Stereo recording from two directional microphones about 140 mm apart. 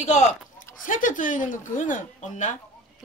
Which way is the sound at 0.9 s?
70° left (ahead or behind).